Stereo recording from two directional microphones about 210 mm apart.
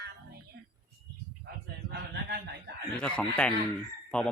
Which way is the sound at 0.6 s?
50° right (ahead or behind).